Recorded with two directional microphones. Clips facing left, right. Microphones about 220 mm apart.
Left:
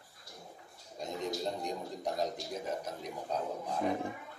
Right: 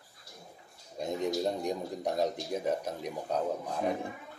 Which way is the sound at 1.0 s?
65° right (ahead or behind).